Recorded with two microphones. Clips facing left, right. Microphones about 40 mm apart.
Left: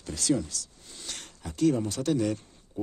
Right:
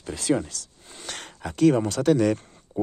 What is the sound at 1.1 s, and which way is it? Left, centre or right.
Speech, right.